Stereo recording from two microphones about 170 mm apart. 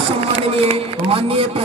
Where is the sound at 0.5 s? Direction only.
35° right (ahead or behind).